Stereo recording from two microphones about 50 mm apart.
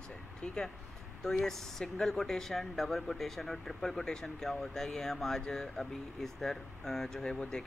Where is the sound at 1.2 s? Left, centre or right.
Centre.